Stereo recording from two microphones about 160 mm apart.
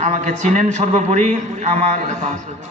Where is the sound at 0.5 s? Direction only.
45° right (ahead or behind).